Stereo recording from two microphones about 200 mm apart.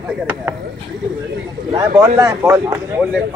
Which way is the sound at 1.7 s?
20° right (ahead or behind).